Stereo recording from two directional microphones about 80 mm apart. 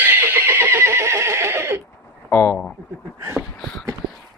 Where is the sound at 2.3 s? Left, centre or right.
Left.